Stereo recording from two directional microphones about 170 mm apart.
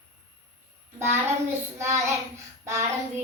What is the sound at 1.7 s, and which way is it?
Child singing, 15° right (ahead or behind).